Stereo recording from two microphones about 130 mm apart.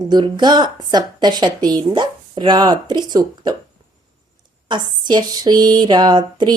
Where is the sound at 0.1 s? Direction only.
35° right (ahead or behind).